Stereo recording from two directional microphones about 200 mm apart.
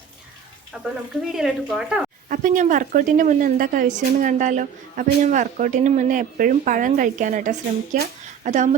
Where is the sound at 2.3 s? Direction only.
40° right (ahead or behind).